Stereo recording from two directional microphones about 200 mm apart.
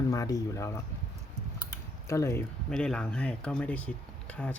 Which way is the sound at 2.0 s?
15° left (ahead or behind).